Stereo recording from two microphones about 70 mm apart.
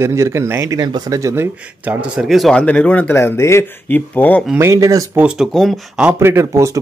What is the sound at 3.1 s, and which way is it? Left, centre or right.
Speech, left.